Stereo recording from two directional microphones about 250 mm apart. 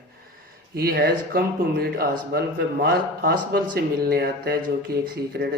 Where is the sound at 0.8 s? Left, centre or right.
Right.